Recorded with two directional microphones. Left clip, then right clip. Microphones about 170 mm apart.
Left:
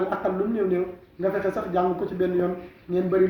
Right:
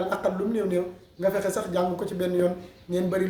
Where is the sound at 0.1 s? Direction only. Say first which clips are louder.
Left 1 dB; 30° right (ahead or behind).